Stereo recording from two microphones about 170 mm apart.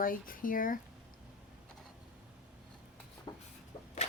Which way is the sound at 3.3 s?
25° left (ahead or behind).